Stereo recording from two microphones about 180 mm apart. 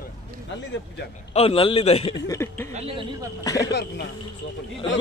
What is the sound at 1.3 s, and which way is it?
Speech, 30° left (ahead or behind).